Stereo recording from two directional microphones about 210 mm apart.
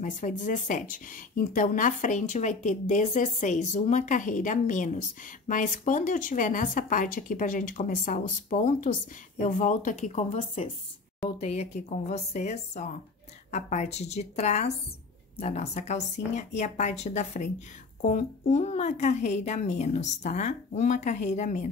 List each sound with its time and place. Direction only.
0.0 s a woman's voice: 35° left (ahead or behind)